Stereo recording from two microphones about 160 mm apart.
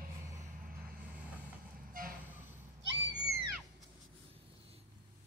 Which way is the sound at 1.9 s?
60° right (ahead or behind).